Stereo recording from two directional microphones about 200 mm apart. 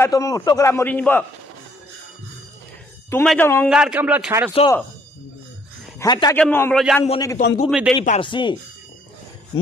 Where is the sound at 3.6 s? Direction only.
5° right (ahead or behind).